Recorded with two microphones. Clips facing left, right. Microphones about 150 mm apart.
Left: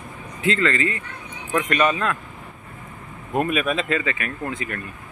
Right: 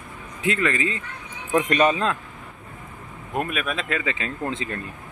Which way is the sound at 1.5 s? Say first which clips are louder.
Right 1 dB; 30° right (ahead or behind).